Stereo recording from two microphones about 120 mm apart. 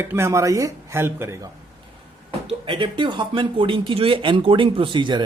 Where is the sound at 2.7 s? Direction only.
40° right (ahead or behind).